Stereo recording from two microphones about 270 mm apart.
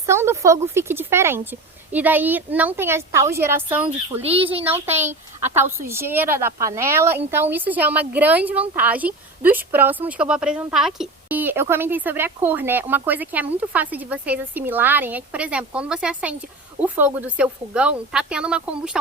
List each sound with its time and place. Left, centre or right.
0.0 s speech: centre
4.2 s speech: right
4.9 s a woman's voice: centre